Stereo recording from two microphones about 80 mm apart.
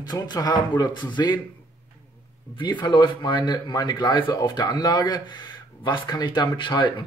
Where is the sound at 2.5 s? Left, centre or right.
Left.